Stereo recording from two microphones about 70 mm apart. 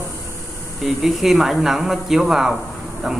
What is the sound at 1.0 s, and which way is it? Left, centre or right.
Speech, centre.